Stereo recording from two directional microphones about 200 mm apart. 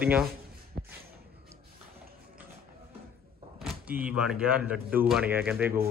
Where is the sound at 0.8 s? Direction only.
50° right (ahead or behind).